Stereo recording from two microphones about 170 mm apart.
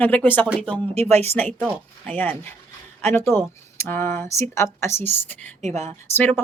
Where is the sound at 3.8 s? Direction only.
15° left (ahead or behind).